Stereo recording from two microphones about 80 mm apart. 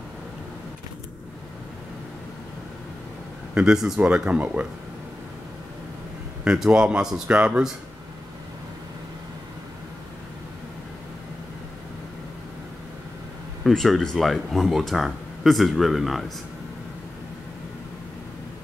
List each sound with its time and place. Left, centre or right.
3.5 s a man's voice: centre
6.4 s a man's voice: centre
13.7 s speech: centre